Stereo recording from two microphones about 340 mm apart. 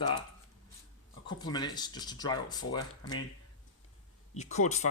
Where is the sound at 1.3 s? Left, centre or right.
Centre.